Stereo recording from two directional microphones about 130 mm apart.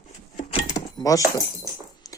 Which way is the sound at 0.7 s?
25° left (ahead or behind).